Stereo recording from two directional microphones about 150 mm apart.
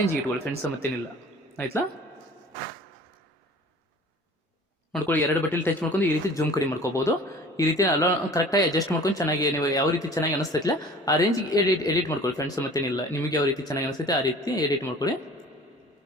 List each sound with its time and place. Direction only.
0.6 s speech: 10° left (ahead or behind)
5.0 s speech: 10° left (ahead or behind)